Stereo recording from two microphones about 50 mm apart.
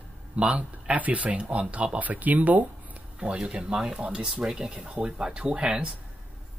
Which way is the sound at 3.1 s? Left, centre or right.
Centre.